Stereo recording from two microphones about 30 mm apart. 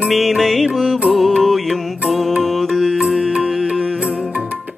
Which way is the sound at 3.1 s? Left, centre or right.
Right.